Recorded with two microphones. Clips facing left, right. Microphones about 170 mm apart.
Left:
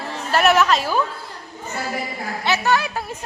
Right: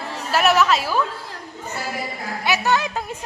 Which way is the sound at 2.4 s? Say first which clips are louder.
Left 1 dB; 15° right (ahead or behind).